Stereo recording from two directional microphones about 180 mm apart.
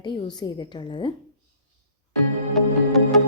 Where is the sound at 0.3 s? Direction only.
25° left (ahead or behind).